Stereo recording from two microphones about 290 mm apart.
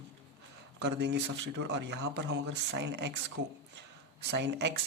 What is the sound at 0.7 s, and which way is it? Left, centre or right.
Speech, right.